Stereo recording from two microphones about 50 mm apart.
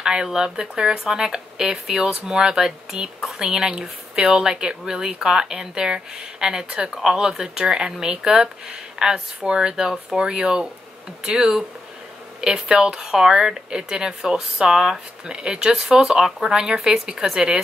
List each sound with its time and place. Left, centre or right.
0.0 s speech: centre